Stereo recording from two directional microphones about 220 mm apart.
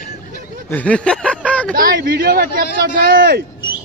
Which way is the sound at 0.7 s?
5° left (ahead or behind).